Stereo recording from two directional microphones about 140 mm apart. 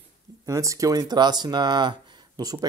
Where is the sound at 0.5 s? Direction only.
25° right (ahead or behind).